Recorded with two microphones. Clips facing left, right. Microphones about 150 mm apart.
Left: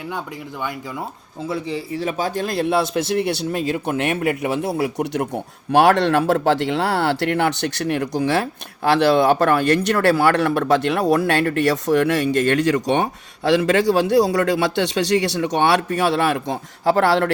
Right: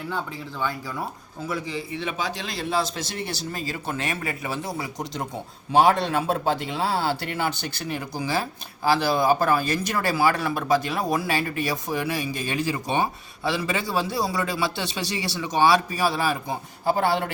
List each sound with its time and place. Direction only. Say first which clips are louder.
1.4 s a man's voice: left 5 dB; 30° left (ahead or behind); by 17.3 s 75° left (ahead or behind)